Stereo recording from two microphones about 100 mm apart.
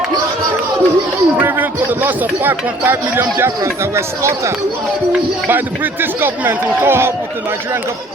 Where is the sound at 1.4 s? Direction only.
20° right (ahead or behind).